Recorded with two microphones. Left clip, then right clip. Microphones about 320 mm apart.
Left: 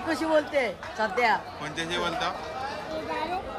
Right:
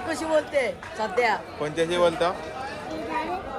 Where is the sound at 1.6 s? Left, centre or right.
Centre.